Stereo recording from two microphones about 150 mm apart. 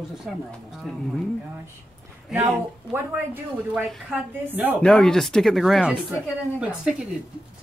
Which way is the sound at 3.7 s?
Centre (ahead or behind).